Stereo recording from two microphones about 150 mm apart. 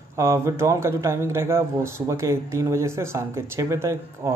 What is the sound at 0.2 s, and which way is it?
A man's voice, 20° right (ahead or behind).